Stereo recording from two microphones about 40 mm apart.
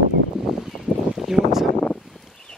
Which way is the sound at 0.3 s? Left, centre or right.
Centre.